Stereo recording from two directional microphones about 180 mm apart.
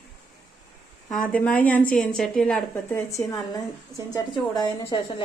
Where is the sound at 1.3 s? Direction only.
10° left (ahead or behind).